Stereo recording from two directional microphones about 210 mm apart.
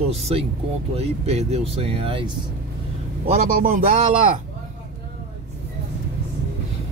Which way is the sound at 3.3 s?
40° right (ahead or behind).